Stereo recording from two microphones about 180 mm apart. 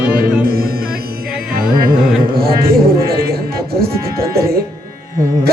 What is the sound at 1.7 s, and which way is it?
Music, 55° right (ahead or behind).